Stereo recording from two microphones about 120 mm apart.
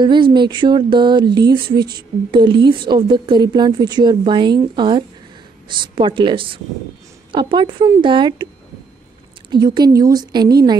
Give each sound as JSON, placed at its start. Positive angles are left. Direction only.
{"t": 0.0, "sound": "a woman's voice", "side_deg": -40}
{"t": 9.5, "sound": "a woman's voice", "side_deg": -35}